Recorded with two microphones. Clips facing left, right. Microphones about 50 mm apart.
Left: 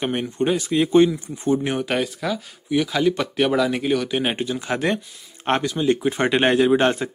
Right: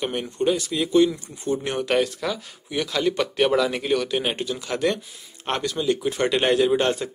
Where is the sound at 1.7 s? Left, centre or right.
Centre.